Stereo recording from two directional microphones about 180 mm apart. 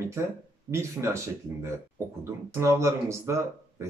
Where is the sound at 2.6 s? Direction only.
15° right (ahead or behind).